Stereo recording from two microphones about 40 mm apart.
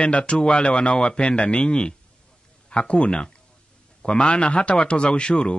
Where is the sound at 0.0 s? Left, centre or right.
Left.